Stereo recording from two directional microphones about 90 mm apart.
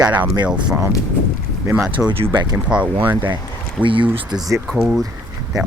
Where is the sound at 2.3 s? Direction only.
55° right (ahead or behind).